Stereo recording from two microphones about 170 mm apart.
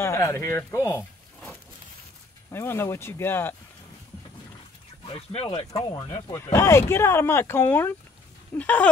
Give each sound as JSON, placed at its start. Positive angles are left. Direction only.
{"t": 0.0, "sound": "speech", "side_deg": 15}
{"t": 2.5, "sound": "speech", "side_deg": 15}
{"t": 5.0, "sound": "speech", "side_deg": 35}
{"t": 5.7, "sound": "speech", "side_deg": 20}